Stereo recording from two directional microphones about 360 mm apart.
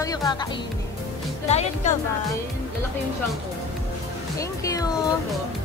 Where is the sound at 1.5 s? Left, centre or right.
Centre.